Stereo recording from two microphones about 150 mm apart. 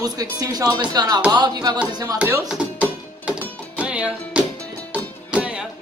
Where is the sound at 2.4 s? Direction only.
5° right (ahead or behind).